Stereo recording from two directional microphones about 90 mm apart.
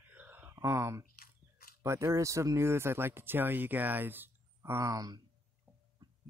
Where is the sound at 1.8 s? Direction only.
30° right (ahead or behind).